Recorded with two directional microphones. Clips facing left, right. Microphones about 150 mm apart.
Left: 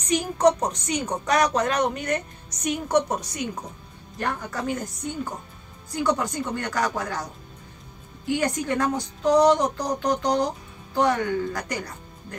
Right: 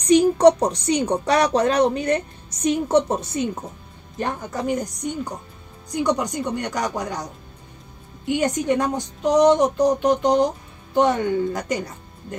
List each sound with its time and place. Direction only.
0.0 s speech: 35° right (ahead or behind)
8.3 s speech: 20° right (ahead or behind)